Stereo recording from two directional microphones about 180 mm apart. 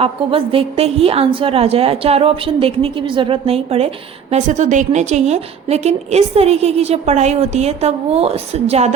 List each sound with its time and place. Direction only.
0.0 s a woman's voice: 30° right (ahead or behind)